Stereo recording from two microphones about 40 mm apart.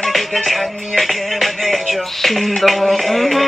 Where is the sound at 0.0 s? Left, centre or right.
Centre.